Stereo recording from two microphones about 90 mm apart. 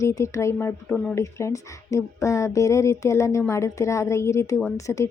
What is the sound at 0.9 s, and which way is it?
Speech, 10° left (ahead or behind).